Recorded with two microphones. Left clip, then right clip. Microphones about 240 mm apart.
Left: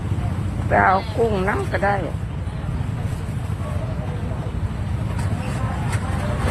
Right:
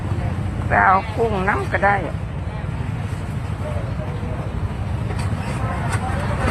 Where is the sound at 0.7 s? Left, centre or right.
Centre.